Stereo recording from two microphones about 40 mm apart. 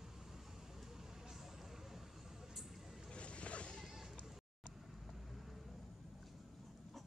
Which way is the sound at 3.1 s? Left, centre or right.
Left.